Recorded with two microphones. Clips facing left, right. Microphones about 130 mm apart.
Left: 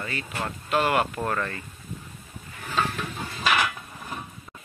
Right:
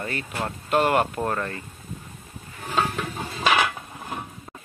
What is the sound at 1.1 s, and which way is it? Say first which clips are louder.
Speech: right 1 dB; 25° right (ahead or behind).